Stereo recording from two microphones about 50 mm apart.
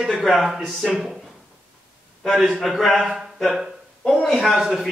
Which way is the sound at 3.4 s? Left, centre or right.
Centre.